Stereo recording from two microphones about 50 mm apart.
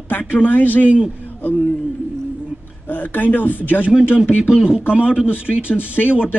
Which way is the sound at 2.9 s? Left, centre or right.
Left.